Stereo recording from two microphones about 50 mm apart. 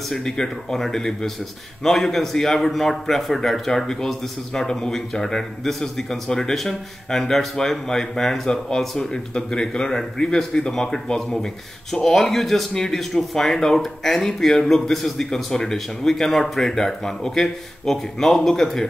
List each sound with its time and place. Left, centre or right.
0.1 s a man's voice: centre